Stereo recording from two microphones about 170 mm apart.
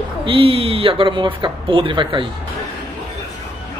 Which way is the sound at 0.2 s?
30° right (ahead or behind).